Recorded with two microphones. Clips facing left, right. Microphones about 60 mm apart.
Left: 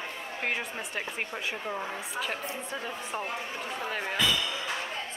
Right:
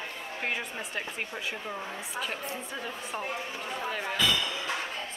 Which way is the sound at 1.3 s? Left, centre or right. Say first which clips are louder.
Left 2 dB; centre.